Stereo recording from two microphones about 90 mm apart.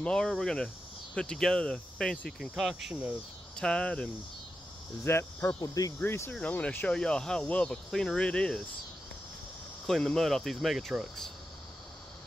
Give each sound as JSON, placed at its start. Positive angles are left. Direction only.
{"t": 0.0, "sound": "speech", "side_deg": 10}
{"t": 2.9, "sound": "speech", "side_deg": -15}
{"t": 3.5, "sound": "speech", "side_deg": 10}
{"t": 5.0, "sound": "cricket", "side_deg": 25}
{"t": 5.6, "sound": "speech", "side_deg": 40}
{"t": 5.9, "sound": "cricket", "side_deg": 25}
{"t": 6.9, "sound": "speech", "side_deg": 10}
{"t": 9.8, "sound": "speech", "side_deg": 5}